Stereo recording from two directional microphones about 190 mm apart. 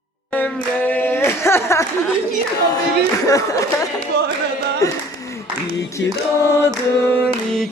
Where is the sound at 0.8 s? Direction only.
10° left (ahead or behind).